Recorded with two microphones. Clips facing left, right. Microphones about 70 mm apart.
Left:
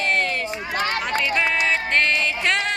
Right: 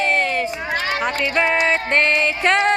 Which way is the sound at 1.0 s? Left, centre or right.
Right.